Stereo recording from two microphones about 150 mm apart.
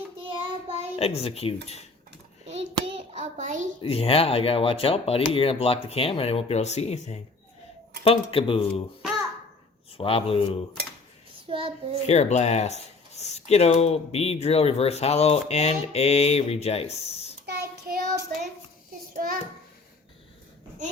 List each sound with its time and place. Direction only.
0.2 s child singing: 35° right (ahead or behind)
0.9 s speech: 40° left (ahead or behind)
2.5 s hands: 40° right (ahead or behind)
3.8 s speech: 40° left (ahead or behind)
10.0 s speech: 40° left (ahead or behind)
11.4 s a child's voice: 40° right (ahead or behind)
12.0 s speech: 45° left (ahead or behind)
17.4 s child singing: 90° right